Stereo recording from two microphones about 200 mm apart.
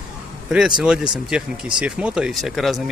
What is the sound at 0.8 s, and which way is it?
Speech, 5° right (ahead or behind).